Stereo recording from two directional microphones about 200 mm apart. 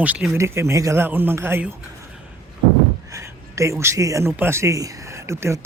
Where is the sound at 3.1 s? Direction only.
15° right (ahead or behind).